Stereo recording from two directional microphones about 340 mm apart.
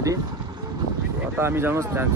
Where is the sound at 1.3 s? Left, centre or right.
Centre.